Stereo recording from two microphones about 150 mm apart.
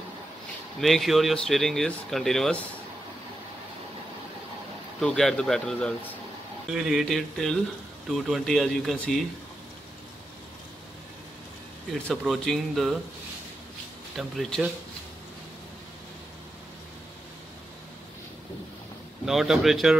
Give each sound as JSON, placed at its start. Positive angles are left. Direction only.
{"t": 0.7, "sound": "speech", "side_deg": 0}
{"t": 5.0, "sound": "speech", "side_deg": 5}
{"t": 11.9, "sound": "speech", "side_deg": 0}
{"t": 14.1, "sound": "speech", "side_deg": 0}
{"t": 19.2, "sound": "speech", "side_deg": 0}